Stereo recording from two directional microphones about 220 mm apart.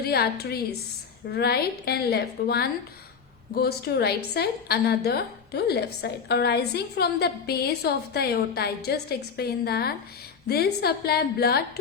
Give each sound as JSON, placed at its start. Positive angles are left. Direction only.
{"t": 0.0, "sound": "a woman's voice", "side_deg": 45}